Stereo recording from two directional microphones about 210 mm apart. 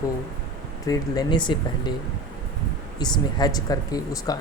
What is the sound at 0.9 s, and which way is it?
Speech, 20° left (ahead or behind).